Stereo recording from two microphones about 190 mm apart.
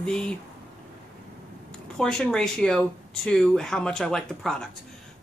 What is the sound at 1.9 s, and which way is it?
Speech, 5° left (ahead or behind).